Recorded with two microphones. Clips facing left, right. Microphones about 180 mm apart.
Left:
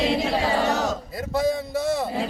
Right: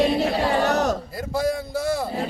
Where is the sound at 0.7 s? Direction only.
65° right (ahead or behind).